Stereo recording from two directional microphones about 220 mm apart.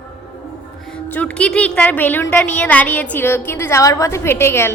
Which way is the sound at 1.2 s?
5° left (ahead or behind).